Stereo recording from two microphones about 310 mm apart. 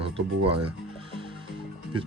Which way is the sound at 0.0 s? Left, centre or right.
Centre.